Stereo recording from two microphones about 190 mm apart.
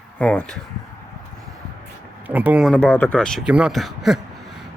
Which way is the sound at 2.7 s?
10° left (ahead or behind).